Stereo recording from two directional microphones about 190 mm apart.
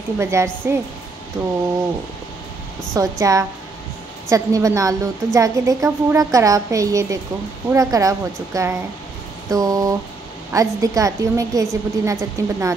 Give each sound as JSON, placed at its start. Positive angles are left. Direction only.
{"t": 0.2, "sound": "a woman's voice", "side_deg": -15}
{"t": 2.9, "sound": "a woman's voice", "side_deg": -15}